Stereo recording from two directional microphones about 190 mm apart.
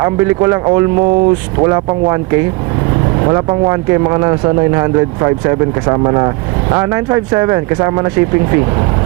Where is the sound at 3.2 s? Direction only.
20° right (ahead or behind).